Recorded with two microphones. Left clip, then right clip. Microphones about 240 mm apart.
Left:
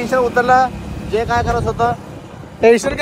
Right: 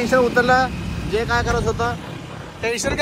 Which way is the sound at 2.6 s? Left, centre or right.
Left.